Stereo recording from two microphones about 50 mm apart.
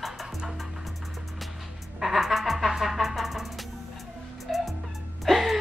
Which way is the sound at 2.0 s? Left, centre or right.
Centre.